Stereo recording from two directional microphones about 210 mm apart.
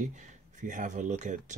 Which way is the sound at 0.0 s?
35° right (ahead or behind).